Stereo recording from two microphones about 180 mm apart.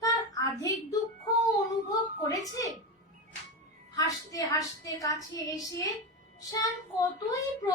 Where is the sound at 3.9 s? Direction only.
20° left (ahead or behind).